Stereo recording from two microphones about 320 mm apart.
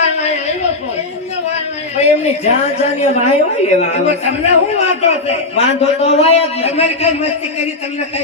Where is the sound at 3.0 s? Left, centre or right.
Left.